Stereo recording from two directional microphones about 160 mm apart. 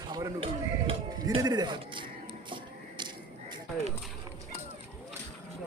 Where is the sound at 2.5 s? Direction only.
30° right (ahead or behind).